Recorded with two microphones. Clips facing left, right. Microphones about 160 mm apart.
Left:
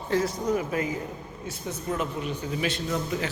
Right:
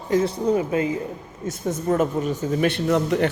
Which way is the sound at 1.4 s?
45° right (ahead or behind).